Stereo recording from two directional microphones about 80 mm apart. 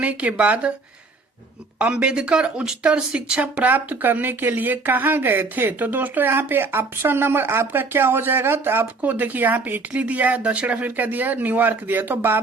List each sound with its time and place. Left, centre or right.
0.0 s speech: centre
1.8 s speech: centre